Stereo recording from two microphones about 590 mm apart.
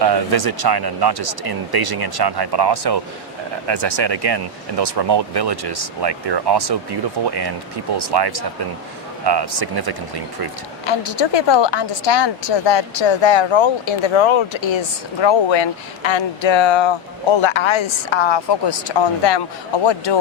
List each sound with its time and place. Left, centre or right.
0.0 s speech: right
7.9 s speech: right
10.8 s speech: left